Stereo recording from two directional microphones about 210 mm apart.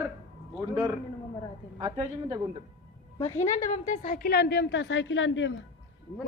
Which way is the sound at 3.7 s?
35° left (ahead or behind).